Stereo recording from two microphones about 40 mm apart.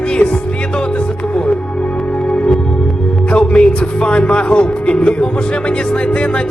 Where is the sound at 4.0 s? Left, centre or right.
Left.